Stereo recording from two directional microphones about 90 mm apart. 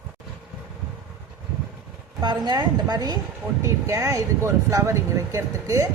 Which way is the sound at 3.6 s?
35° right (ahead or behind).